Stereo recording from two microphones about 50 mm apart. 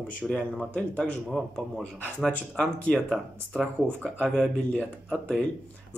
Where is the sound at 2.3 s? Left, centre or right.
Left.